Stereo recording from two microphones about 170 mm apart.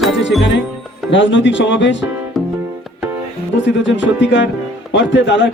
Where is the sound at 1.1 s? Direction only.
90° left.